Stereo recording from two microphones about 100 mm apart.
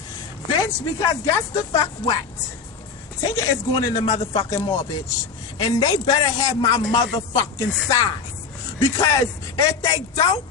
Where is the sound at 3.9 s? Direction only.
90° left.